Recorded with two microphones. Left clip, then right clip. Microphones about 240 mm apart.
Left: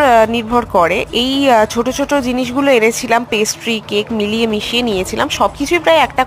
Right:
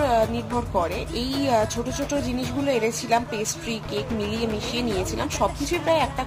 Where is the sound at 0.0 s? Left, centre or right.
Left.